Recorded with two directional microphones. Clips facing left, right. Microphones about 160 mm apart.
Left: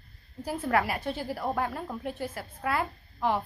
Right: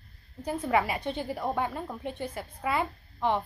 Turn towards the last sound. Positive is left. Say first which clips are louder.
# even
turn(degrees=5)  # may be behind; listen again after turning